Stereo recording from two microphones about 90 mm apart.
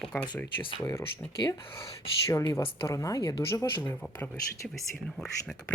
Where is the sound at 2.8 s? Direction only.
40° left (ahead or behind).